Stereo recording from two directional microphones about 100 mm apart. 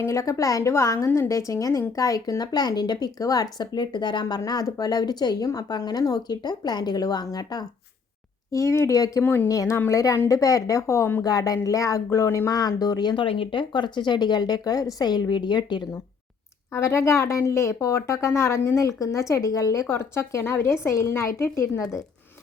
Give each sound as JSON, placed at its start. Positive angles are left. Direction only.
{"t": 0.0, "sound": "speech", "side_deg": 30}
{"t": 8.5, "sound": "speech", "side_deg": 30}
{"t": 9.2, "sound": "speech", "side_deg": 20}
{"t": 9.5, "sound": "speech", "side_deg": 30}
{"t": 11.2, "sound": "speech", "side_deg": 40}
{"t": 13.2, "sound": "a woman's voice", "side_deg": 65}
{"t": 16.7, "sound": "speech", "side_deg": 25}